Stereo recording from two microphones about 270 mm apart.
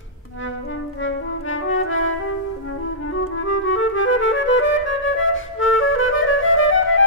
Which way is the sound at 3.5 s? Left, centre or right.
Left.